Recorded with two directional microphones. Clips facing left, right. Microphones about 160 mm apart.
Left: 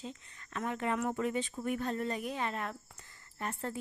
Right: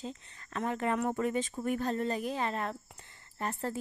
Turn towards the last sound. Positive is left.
turn(degrees=-35)  # may be behind; listen again after turning